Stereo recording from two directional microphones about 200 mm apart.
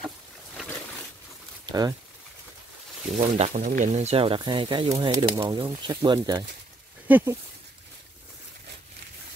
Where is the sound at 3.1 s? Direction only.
35° right (ahead or behind); by 6.5 s 20° right (ahead or behind).